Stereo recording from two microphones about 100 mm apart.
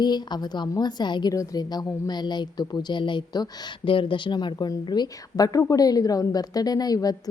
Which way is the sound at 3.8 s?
60° left (ahead or behind).